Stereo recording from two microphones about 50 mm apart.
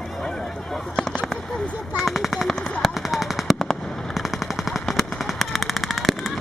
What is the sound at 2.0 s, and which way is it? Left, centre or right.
Machine gun, centre.